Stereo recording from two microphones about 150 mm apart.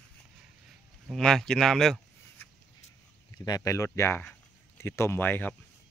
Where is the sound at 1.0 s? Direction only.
Centre (ahead or behind).